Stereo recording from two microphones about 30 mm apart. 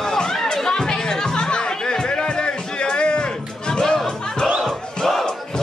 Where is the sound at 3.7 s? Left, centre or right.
Left.